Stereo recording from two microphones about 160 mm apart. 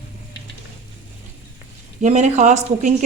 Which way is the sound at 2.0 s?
50° right (ahead or behind).